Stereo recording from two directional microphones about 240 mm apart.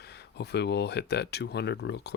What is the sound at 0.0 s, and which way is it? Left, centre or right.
Speech, left.